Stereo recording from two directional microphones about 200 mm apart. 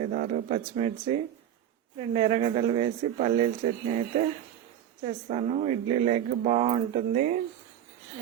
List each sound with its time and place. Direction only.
0.0 s speech: 40° right (ahead or behind)
5.0 s speech: 35° right (ahead or behind)